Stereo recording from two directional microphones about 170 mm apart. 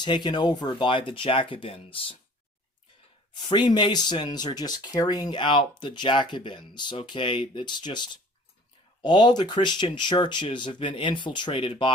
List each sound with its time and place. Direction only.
0.0 s speech: 25° left (ahead or behind)
3.3 s speech: 25° left (ahead or behind)